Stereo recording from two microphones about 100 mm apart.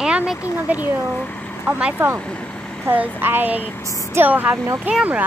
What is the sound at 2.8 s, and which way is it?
Speech, 20° right (ahead or behind).